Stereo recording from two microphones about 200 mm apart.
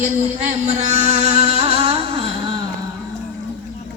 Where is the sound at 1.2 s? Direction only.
30° right (ahead or behind).